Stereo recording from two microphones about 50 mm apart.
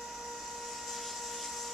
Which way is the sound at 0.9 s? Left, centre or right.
Centre.